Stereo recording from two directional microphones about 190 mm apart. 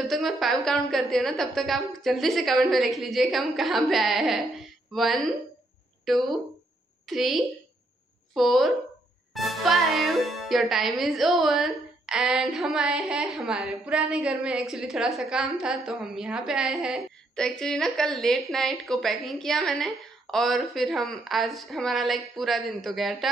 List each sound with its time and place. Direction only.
0.0 s speech: centre (ahead or behind)